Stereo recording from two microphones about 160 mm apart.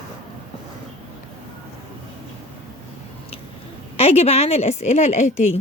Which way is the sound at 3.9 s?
40° left (ahead or behind).